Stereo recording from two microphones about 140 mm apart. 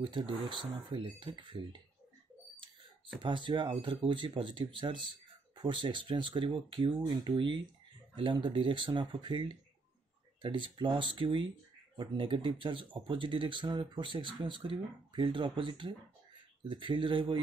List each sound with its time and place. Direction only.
0.0 s speech: 35° right (ahead or behind)
3.2 s speech: 35° right (ahead or behind)